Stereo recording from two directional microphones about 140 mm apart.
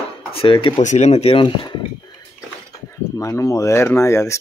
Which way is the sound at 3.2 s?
20° left (ahead or behind).